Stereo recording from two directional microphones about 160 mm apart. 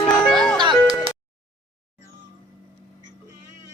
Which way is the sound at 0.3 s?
5° left (ahead or behind).